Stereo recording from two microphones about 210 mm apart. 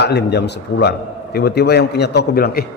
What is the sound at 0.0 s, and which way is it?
A man's voice, 50° left (ahead or behind).